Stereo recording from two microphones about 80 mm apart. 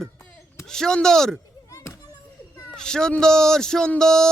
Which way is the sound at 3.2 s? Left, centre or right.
Centre.